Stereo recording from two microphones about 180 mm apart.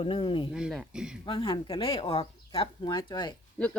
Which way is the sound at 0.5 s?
Centre (ahead or behind).